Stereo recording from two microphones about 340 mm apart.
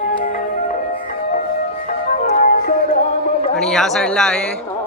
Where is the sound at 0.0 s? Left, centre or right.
Left.